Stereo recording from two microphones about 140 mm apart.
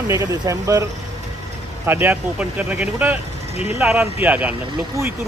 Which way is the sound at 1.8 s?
15° right (ahead or behind).